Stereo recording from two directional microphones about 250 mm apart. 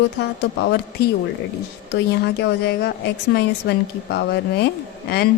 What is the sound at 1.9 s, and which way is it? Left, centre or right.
A woman's voice, left.